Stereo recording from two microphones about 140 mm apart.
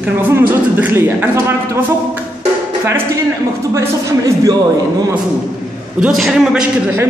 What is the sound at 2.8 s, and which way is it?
Speech, 20° right (ahead or behind).